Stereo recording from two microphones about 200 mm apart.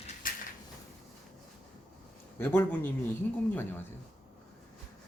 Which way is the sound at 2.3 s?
10° left (ahead or behind).